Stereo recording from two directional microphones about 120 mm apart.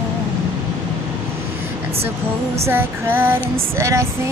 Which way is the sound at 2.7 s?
15° right (ahead or behind).